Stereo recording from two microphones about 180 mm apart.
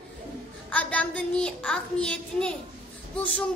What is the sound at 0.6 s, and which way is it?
Speech, 5° left (ahead or behind).